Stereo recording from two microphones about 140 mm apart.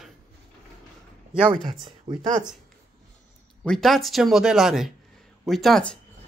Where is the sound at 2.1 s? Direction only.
30° right (ahead or behind).